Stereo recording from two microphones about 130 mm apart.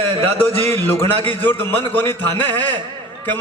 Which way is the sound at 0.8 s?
15° left (ahead or behind).